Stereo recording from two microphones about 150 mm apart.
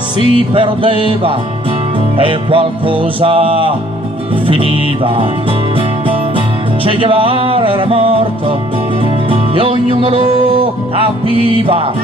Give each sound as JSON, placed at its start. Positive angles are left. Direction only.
{"t": 0.4, "sound": "music", "side_deg": -35}